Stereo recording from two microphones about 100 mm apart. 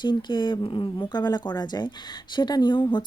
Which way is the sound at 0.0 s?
50° left (ahead or behind).